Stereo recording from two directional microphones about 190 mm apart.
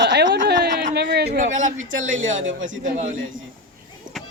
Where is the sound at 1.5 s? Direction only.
40° right (ahead or behind).